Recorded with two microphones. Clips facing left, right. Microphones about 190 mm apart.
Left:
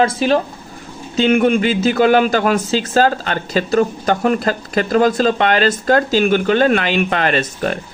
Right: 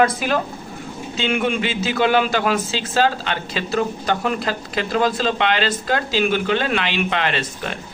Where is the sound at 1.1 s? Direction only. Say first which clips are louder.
Left 8 dB; 45° left (ahead or behind).